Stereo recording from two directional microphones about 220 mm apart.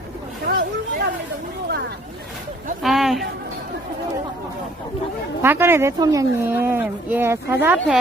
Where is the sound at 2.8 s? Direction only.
Centre (ahead or behind).